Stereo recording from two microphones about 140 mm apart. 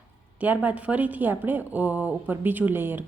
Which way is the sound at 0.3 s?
10° right (ahead or behind).